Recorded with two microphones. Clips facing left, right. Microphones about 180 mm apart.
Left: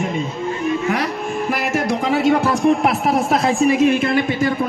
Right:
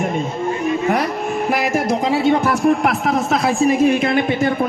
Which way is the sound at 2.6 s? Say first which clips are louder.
Even; centre (ahead or behind).